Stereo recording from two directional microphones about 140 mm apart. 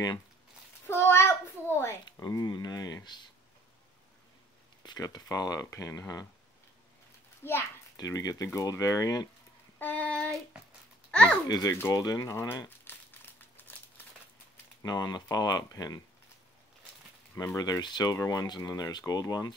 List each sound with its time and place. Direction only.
0.8 s a child's voice: 15° left (ahead or behind)
4.8 s speech: 30° left (ahead or behind)
7.4 s speech: 20° left (ahead or behind)
9.8 s child singing: 10° left (ahead or behind)
11.1 s babbling: 10° left (ahead or behind)
11.4 s speech: 30° left (ahead or behind)
11.9 s crumpling: 25° left (ahead or behind)
14.8 s speech: 30° left (ahead or behind)
17.4 s speech: 25° left (ahead or behind)